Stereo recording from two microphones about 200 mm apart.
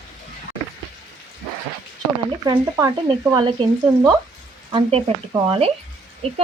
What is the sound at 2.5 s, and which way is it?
Speech, 20° right (ahead or behind).